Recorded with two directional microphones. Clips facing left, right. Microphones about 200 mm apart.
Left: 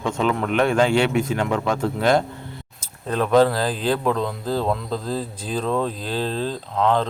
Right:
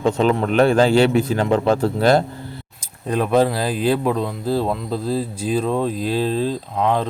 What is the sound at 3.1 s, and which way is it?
Speech, 10° right (ahead or behind).